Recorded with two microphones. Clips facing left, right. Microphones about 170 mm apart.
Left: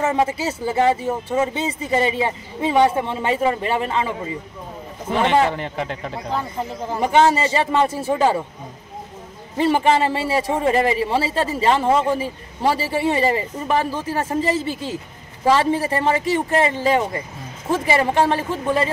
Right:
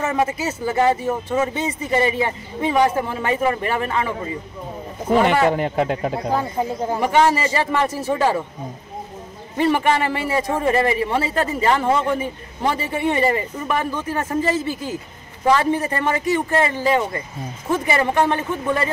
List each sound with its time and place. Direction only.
0.0 s speech: 30° left (ahead or behind)
5.2 s speech: 50° right (ahead or behind)
7.0 s speech: 25° left (ahead or behind)
9.6 s speech: 25° left (ahead or behind)